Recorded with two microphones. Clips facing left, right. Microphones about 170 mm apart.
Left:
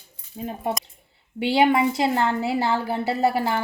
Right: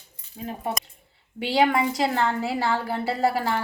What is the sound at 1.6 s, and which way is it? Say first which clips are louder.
Speech: left 2 dB; 25° left (ahead or behind).